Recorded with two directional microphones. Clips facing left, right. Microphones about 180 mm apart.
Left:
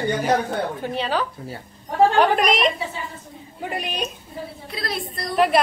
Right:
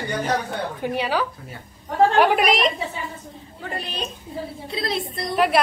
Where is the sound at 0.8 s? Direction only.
10° right (ahead or behind).